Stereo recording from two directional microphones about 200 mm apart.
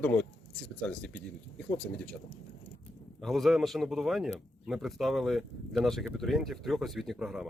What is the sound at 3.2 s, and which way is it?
Speech, centre (ahead or behind).